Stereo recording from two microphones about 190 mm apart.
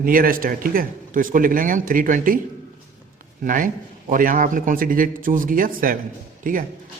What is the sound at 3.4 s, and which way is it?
A man's voice, 45° right (ahead or behind).